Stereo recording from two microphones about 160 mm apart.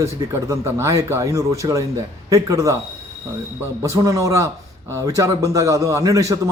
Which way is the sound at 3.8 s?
20° right (ahead or behind).